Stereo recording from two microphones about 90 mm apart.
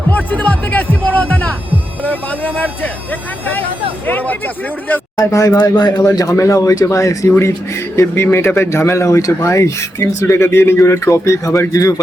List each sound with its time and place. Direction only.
0.1 s speech: 20° left (ahead or behind)
4.0 s speech: 20° left (ahead or behind)
5.1 s speech: 40° left (ahead or behind)
5.5 s speech: 50° left (ahead or behind)
6.1 s speech: 35° left (ahead or behind)